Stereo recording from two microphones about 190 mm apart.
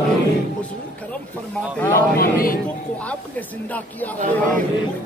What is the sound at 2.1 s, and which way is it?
Speech, 50° left (ahead or behind).